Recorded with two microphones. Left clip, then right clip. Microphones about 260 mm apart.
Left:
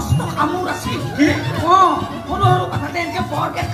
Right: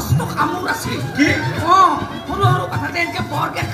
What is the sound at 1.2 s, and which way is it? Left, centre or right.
Music, right.